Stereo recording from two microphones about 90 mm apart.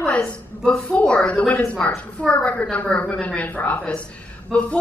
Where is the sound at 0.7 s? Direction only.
15° left (ahead or behind).